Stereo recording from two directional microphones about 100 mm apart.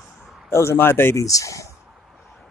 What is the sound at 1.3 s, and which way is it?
Speech, 35° left (ahead or behind).